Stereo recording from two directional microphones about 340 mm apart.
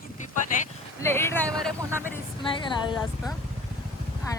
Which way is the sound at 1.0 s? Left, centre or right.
Centre.